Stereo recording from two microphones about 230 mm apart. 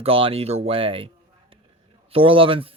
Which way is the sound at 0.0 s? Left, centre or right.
Right.